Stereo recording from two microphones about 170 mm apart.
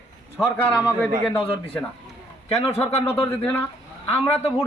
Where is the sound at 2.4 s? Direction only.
40° left (ahead or behind).